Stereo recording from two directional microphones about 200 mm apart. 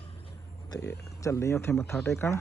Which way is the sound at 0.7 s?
15° left (ahead or behind).